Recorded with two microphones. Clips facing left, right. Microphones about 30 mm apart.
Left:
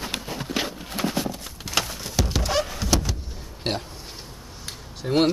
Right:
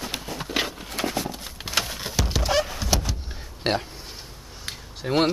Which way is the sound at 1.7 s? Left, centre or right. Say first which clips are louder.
Even; centre.